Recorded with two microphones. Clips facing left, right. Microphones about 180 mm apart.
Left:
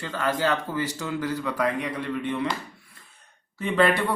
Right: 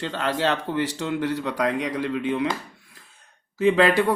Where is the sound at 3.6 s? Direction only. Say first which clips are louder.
Right 4 dB; 90° right.